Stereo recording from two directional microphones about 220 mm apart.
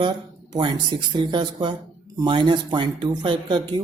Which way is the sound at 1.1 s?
20° right (ahead or behind).